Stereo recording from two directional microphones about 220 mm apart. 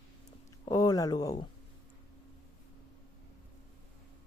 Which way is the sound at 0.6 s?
15° left (ahead or behind).